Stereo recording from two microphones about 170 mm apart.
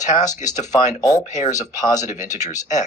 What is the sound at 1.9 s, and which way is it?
Speech, 45° left (ahead or behind).